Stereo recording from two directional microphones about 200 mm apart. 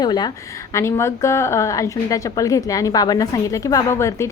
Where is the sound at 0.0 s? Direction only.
20° left (ahead or behind).